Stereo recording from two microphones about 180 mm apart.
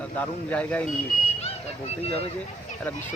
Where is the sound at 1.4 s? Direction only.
35° left (ahead or behind).